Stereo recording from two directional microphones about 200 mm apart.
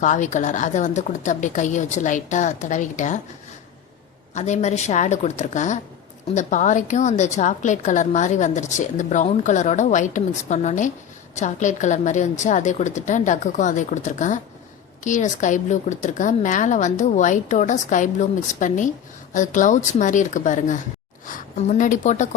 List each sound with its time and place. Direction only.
0.0 s a woman's voice: 40° left (ahead or behind)
4.4 s a woman's voice: 35° left (ahead or behind)